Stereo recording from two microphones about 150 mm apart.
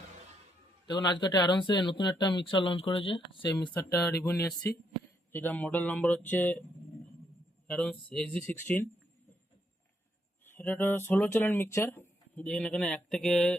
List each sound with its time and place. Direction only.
0.9 s speech: 30° left (ahead or behind)
3.8 s speech: 10° left (ahead or behind)
7.7 s speech: 5° left (ahead or behind)
10.5 s speech: 15° left (ahead or behind)